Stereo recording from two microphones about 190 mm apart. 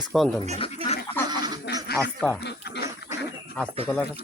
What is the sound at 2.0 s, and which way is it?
Speech, centre (ahead or behind).